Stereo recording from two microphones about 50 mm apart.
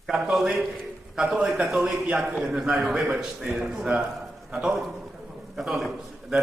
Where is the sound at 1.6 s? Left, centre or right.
Centre.